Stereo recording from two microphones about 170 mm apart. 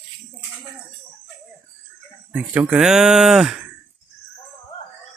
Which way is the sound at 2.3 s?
10° right (ahead or behind).